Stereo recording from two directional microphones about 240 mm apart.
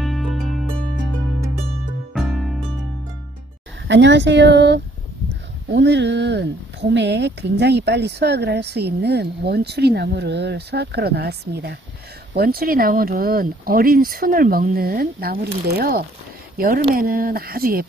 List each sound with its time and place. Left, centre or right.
0.0 s music: centre
2.1 s music: centre
3.8 s speech: right